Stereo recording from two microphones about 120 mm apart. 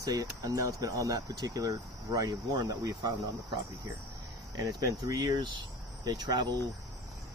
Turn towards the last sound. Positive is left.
turn(degrees=-40)  # may be behind; listen again after turning